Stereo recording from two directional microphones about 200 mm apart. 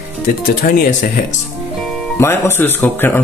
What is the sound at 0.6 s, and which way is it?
Speech, 45° left (ahead or behind).